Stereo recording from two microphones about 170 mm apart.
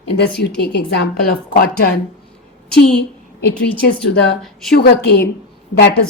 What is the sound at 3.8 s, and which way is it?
A woman's voice, 65° left (ahead or behind).